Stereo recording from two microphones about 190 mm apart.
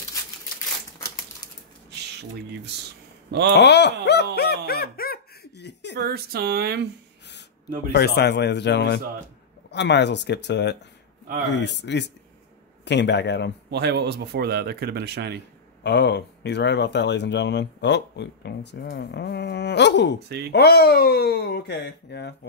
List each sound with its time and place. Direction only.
3.3 s speech: 65° right (ahead or behind)
3.5 s speech: 65° left (ahead or behind)
4.0 s a sound: 60° left (ahead or behind)
5.9 s speech: 55° right (ahead or behind)
7.9 s speech: 55° left (ahead or behind)
13.7 s speech: 60° right (ahead or behind)
15.8 s speech: 65° left (ahead or behind)
20.2 s speech: 60° right (ahead or behind)
20.5 s speech: 55° left (ahead or behind)